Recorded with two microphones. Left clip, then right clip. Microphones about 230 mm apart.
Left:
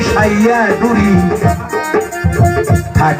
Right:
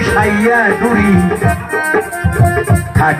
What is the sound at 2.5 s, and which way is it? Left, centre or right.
Music, left.